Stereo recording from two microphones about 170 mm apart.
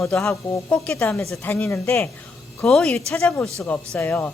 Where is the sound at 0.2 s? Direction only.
15° left (ahead or behind).